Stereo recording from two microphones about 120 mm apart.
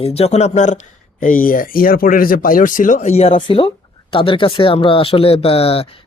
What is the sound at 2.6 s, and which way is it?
Speech, 90° left.